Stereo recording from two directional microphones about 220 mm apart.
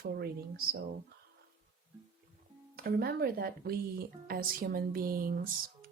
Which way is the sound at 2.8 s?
45° right (ahead or behind).